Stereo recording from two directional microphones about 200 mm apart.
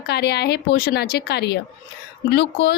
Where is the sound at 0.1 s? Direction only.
55° left (ahead or behind).